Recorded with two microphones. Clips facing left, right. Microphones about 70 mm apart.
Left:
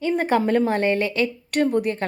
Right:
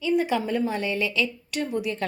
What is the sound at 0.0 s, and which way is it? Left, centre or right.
A woman's voice, left.